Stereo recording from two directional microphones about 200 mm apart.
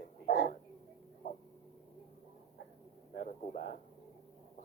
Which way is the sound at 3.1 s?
45° left (ahead or behind).